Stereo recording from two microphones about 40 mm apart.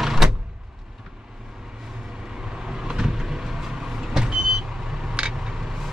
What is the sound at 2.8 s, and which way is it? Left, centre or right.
Vehicle, centre.